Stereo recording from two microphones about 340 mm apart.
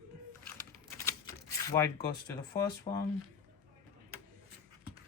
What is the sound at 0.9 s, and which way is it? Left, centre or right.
Typewriter, centre.